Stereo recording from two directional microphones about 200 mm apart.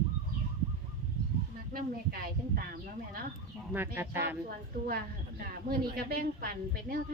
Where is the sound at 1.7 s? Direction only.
45° right (ahead or behind).